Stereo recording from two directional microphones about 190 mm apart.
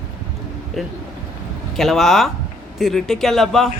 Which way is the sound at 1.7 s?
Centre (ahead or behind).